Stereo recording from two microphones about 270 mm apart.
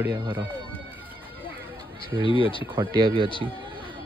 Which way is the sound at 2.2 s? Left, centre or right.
Centre.